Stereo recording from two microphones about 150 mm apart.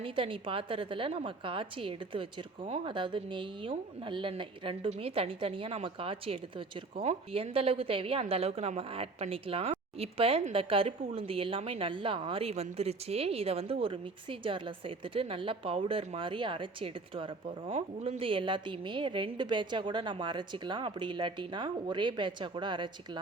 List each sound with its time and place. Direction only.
0.0 s a woman's voice: 35° right (ahead or behind)